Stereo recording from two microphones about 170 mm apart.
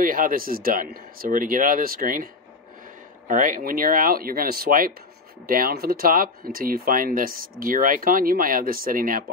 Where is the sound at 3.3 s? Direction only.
50° right (ahead or behind).